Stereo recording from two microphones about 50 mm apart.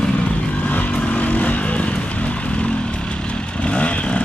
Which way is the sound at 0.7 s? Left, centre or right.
Left.